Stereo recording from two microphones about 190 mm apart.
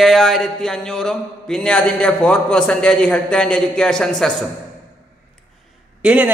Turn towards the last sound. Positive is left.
turn(degrees=-10)  # may be behind; listen again after turning